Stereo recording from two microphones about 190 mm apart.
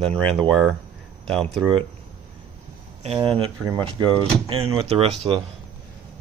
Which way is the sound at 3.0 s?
30° right (ahead or behind).